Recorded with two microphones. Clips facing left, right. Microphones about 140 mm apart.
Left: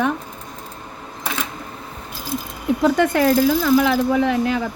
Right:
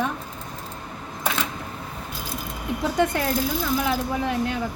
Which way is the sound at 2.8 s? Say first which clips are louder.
Left 7 dB; 90° left.